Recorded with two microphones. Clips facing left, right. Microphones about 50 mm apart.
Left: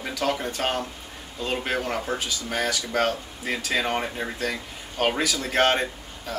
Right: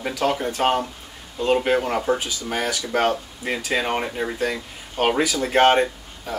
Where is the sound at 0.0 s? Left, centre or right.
Centre.